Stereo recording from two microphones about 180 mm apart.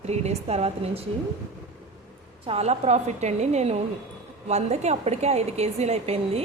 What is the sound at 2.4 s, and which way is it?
A woman's voice, 35° right (ahead or behind).